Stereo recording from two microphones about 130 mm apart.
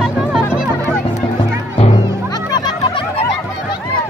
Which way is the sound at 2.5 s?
30° left (ahead or behind).